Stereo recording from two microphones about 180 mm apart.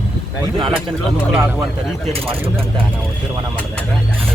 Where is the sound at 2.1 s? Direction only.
30° right (ahead or behind).